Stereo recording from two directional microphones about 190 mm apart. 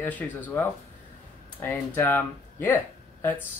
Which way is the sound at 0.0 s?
10° left (ahead or behind).